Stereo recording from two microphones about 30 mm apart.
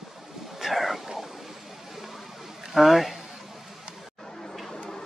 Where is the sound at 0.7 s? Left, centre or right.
Centre.